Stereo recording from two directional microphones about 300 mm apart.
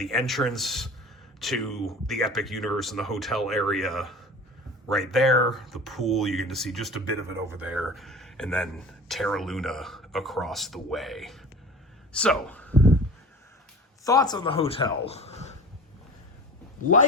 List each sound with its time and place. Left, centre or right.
0.0 s speech: centre
12.1 s a sound: centre
14.0 s speech: centre